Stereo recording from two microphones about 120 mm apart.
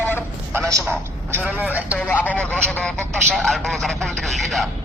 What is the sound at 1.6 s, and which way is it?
Speech, 15° right (ahead or behind).